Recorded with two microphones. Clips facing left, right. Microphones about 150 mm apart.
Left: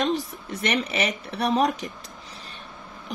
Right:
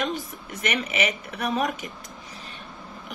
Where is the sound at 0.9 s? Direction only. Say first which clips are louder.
Even; 35° left (ahead or behind).